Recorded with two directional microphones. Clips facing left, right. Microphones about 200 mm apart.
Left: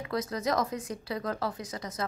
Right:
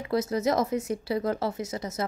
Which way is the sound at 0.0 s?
25° right (ahead or behind).